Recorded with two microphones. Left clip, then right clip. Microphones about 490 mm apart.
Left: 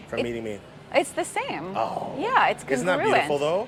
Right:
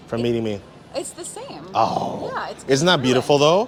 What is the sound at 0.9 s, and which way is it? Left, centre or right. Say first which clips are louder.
Speech: left 7 dB; left.